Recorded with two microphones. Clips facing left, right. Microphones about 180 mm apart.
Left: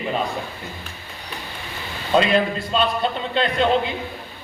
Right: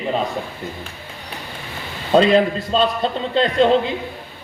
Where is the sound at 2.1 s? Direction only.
35° right (ahead or behind).